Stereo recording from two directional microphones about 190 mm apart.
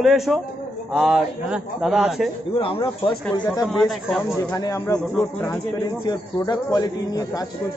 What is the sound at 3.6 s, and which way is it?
Speech, centre (ahead or behind).